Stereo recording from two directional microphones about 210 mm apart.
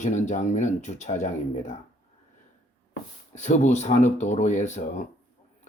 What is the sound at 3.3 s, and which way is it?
Speech, 35° left (ahead or behind).